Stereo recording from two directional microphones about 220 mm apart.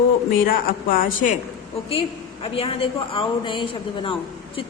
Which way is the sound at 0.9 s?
40° left (ahead or behind).